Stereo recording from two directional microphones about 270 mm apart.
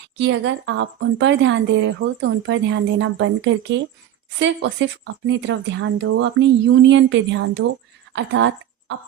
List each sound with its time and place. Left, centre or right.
0.2 s speech: right